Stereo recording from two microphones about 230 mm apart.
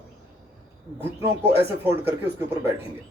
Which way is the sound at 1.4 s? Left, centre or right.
Centre.